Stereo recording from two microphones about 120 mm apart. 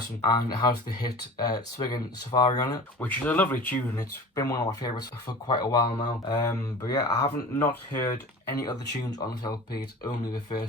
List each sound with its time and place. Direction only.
0.3 s speech: 35° left (ahead or behind)
3.0 s speech: 15° left (ahead or behind)
3.9 s speech: 30° left (ahead or behind)
7.6 s speech: 15° left (ahead or behind); by 10.6 s 35° left (ahead or behind)